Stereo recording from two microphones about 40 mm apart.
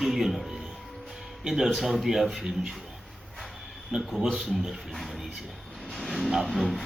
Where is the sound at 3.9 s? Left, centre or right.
Centre.